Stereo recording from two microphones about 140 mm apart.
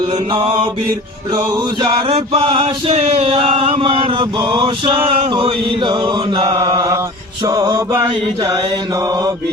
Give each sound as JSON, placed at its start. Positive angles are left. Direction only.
{"t": 0.1, "sound": "chant", "side_deg": -35}
{"t": 7.4, "sound": "mantra", "side_deg": -25}
{"t": 7.8, "sound": "mantra", "side_deg": -15}
{"t": 8.1, "sound": "mantra", "side_deg": -30}